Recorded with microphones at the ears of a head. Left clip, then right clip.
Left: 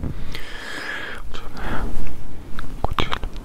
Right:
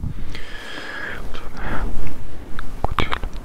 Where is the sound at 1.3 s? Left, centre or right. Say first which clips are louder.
Right 1 dB; centre.